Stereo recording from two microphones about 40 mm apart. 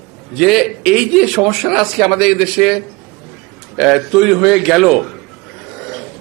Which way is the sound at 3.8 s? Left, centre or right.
Centre.